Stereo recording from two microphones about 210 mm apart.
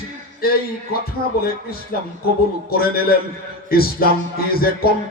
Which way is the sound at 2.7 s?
45° left (ahead or behind).